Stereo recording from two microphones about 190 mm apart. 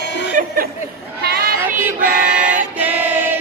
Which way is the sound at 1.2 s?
55° right (ahead or behind).